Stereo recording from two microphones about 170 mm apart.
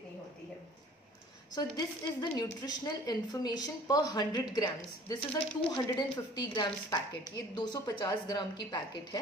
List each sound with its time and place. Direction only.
1.5 s a woman's voice: 25° left (ahead or behind)